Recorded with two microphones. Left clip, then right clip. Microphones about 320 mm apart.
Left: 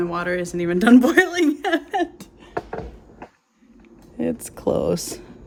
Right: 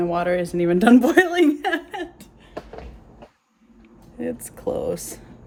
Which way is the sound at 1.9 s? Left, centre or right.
Centre.